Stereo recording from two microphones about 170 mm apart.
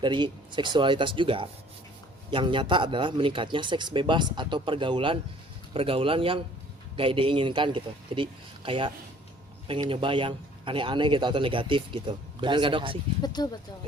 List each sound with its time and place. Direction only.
0.0 s a man's voice: 25° right (ahead or behind)
13.2 s speech: 25° left (ahead or behind)